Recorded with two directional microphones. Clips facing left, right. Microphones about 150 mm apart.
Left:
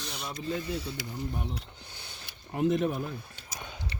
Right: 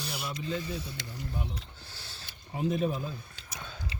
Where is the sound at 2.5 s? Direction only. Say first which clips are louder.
Left 3 dB; 80° left.